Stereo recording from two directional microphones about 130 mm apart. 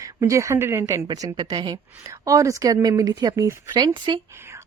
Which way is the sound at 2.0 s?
25° right (ahead or behind).